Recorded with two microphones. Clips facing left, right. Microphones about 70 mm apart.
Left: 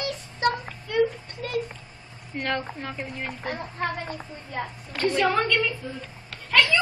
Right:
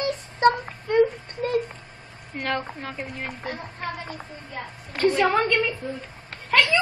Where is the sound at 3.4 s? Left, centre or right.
Left.